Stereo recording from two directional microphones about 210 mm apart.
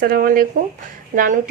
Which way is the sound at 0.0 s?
45° right (ahead or behind).